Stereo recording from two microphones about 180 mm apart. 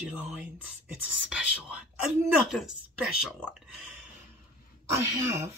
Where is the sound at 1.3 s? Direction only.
5° right (ahead or behind).